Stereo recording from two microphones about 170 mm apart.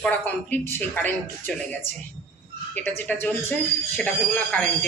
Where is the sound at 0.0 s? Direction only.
10° left (ahead or behind).